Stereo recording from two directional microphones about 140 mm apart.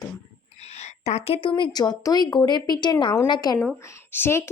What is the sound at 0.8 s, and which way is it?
A woman's voice, 50° left (ahead or behind).